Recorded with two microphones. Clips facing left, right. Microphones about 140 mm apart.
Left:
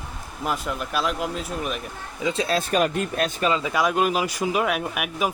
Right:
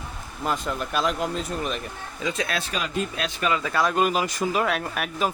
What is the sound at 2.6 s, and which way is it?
Speech, 50° left (ahead or behind).